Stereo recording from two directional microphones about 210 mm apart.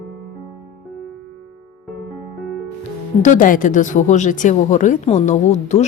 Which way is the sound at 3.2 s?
40° left (ahead or behind).